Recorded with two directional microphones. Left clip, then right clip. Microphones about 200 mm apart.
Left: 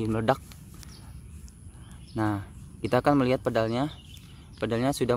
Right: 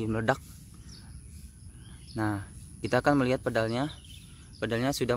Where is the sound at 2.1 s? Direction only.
5° left (ahead or behind).